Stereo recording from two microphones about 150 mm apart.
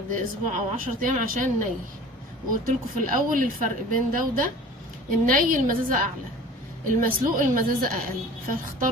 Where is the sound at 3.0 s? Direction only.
65° right (ahead or behind).